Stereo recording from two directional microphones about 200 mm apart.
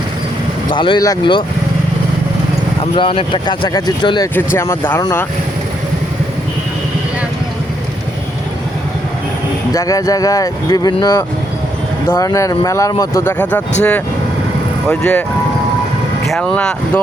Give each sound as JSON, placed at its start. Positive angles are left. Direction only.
{"t": 0.7, "sound": "speech", "side_deg": 25}
{"t": 2.9, "sound": "speech", "side_deg": 30}
{"t": 9.7, "sound": "speech", "side_deg": 15}
{"t": 14.8, "sound": "speech", "side_deg": 5}
{"t": 16.2, "sound": "speech", "side_deg": 0}